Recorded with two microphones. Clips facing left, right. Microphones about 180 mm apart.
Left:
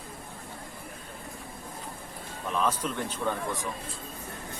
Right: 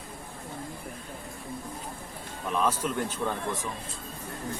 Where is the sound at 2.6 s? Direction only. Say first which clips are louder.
Right 1 dB; 5° right (ahead or behind).